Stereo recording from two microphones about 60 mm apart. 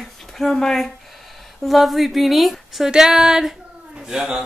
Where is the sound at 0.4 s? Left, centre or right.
Centre.